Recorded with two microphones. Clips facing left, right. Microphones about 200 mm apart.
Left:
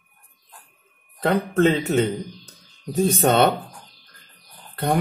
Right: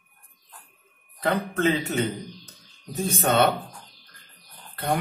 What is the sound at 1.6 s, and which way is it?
Speech, 40° left (ahead or behind).